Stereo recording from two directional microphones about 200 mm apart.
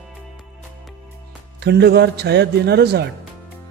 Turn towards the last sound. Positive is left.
turn(degrees=-55)  # may be behind; listen again after turning